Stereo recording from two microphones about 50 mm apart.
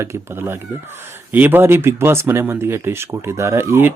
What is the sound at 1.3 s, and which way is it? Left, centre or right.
Speech, right.